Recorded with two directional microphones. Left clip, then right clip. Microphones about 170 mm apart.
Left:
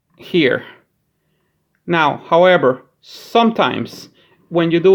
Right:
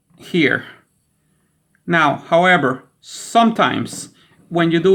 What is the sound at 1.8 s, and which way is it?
Speech, 25° left (ahead or behind).